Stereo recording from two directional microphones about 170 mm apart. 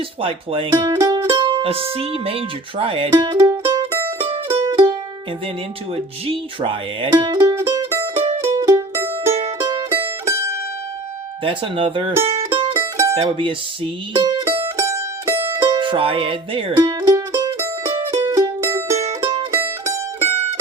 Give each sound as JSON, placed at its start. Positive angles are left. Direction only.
{"t": 0.2, "sound": "speech", "side_deg": -30}
{"t": 4.2, "sound": "music", "side_deg": -35}
{"t": 6.2, "sound": "speech", "side_deg": -35}
{"t": 8.5, "sound": "music", "side_deg": -20}
{"t": 9.3, "sound": "music", "side_deg": -30}
{"t": 10.2, "sound": "mandolin", "side_deg": -15}
{"t": 11.4, "sound": "speech", "side_deg": -30}
{"t": 12.2, "sound": "music", "side_deg": -30}
{"t": 12.7, "sound": "mandolin", "side_deg": -15}
{"t": 13.1, "sound": "speech", "side_deg": -35}
{"t": 14.4, "sound": "music", "side_deg": -15}
{"t": 18.9, "sound": "mandolin", "side_deg": -35}
{"t": 19.5, "sound": "mandolin", "side_deg": -15}